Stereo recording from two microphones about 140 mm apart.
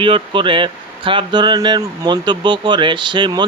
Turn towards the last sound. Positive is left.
turn(degrees=-35)  # may be behind; listen again after turning